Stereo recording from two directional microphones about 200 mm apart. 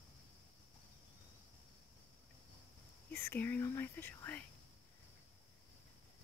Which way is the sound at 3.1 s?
10° left (ahead or behind).